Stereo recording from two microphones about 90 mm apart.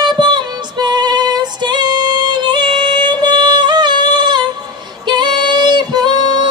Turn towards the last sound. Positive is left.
turn(degrees=-55)  # may be behind; listen again after turning